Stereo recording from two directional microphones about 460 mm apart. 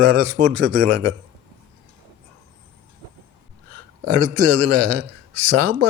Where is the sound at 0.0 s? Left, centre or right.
Right.